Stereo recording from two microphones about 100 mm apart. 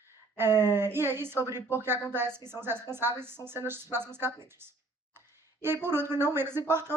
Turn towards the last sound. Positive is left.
turn(degrees=-25)  # may be behind; listen again after turning